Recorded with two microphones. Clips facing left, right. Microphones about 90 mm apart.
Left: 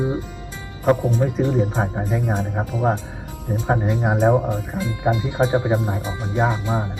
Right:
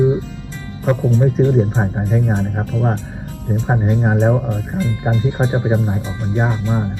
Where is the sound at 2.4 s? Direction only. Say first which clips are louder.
Right 2 dB; 15° left (ahead or behind).